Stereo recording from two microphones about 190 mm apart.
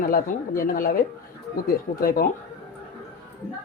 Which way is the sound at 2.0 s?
55° left (ahead or behind).